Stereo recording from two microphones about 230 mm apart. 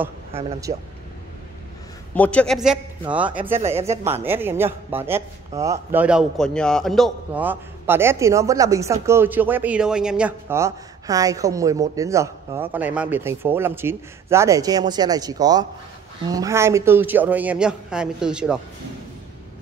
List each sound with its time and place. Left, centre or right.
0.7 s speech: centre
2.1 s speech: centre